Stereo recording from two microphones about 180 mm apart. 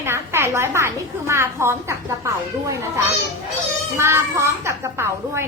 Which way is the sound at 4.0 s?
15° right (ahead or behind).